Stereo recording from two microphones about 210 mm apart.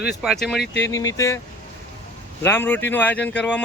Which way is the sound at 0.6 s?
55° left (ahead or behind).